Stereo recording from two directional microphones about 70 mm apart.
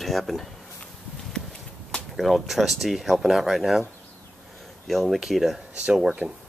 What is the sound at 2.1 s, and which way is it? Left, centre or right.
Speech, centre.